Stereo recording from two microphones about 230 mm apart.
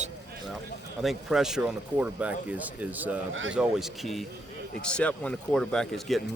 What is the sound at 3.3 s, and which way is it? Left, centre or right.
Speech, right.